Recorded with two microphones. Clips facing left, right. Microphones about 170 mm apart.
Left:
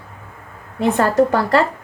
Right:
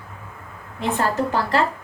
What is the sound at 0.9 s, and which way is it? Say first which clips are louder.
Speech: left 6 dB; 70° left (ahead or behind).